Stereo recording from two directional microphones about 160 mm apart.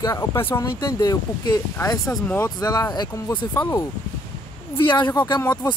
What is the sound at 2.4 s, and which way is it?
Speech, 25° left (ahead or behind).